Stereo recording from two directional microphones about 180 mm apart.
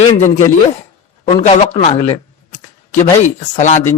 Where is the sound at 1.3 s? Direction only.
35° left (ahead or behind).